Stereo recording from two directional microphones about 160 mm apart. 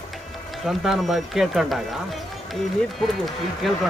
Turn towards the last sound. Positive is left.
turn(degrees=0)  # may be behind; listen again after turning